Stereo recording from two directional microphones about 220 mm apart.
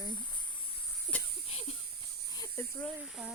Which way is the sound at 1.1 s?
25° right (ahead or behind).